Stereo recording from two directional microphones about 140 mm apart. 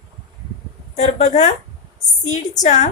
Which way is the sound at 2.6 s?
55° left (ahead or behind).